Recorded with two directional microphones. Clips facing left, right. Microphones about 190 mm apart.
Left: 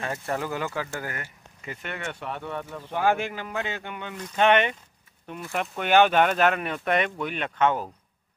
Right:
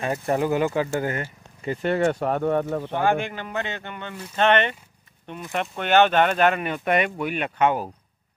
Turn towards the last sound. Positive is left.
turn(degrees=-10)  # may be behind; listen again after turning